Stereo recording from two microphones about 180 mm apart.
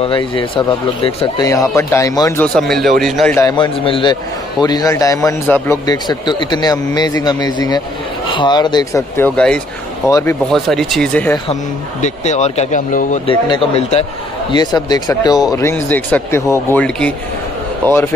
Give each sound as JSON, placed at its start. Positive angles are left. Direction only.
{"t": 0.0, "sound": "a man's voice", "side_deg": 30}
{"t": 1.8, "sound": "speech", "side_deg": 15}
{"t": 2.4, "sound": "a man's voice", "side_deg": 5}
{"t": 3.3, "sound": "a man's voice", "side_deg": 20}
{"t": 10.5, "sound": "a man's voice", "side_deg": 0}
{"t": 12.0, "sound": "speech", "side_deg": 40}
{"t": 13.3, "sound": "speech", "side_deg": 30}
{"t": 14.5, "sound": "speech", "side_deg": 20}